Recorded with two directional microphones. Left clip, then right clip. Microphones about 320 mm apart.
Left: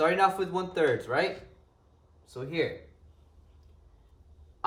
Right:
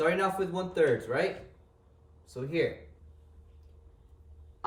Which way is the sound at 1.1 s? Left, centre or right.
Centre.